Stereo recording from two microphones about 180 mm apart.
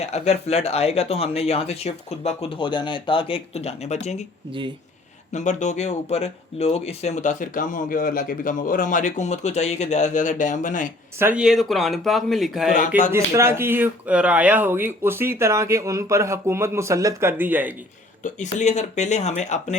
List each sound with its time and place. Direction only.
0.0 s speech: 35° left (ahead or behind)
5.3 s speech: 40° left (ahead or behind)
11.2 s speech: 10° right (ahead or behind)
13.1 s speech: 15° right (ahead or behind)
18.2 s speech: 40° left (ahead or behind)